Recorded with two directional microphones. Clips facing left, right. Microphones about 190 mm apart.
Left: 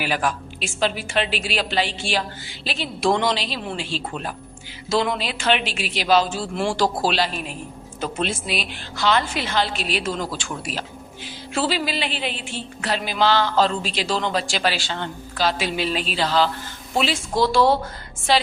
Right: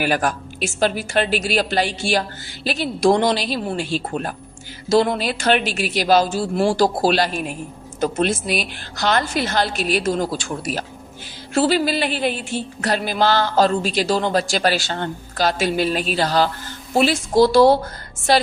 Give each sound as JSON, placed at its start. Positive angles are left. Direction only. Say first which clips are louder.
{"t": 0.0, "sound": "a woman's voice", "louder": "right 4 dB", "side_deg": -45}